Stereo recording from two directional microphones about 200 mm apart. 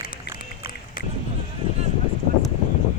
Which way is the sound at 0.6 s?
50° left (ahead or behind).